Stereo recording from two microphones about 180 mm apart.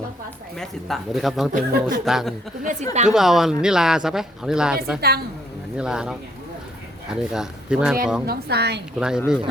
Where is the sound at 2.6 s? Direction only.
40° right (ahead or behind).